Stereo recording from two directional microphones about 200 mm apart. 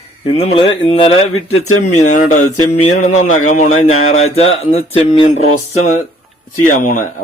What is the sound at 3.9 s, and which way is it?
Speech, 90° left.